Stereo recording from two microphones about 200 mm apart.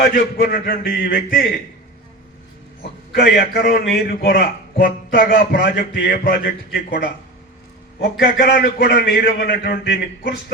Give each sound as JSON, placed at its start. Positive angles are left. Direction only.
{"t": 0.1, "sound": "a man's voice", "side_deg": 45}
{"t": 3.1, "sound": "a man's voice", "side_deg": 55}
{"t": 8.2, "sound": "a man's voice", "side_deg": 50}